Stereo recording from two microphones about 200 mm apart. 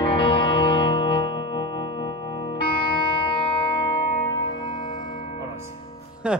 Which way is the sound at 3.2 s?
25° left (ahead or behind).